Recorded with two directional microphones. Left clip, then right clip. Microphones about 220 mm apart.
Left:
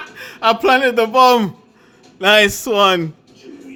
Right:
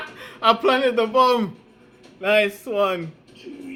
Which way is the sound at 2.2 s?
55° left (ahead or behind).